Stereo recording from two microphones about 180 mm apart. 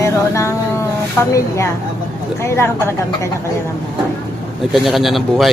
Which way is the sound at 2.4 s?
15° left (ahead or behind).